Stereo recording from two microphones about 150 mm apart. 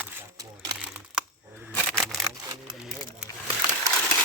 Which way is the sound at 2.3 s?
25° right (ahead or behind).